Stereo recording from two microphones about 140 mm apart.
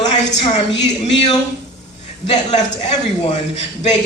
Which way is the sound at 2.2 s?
50° left (ahead or behind).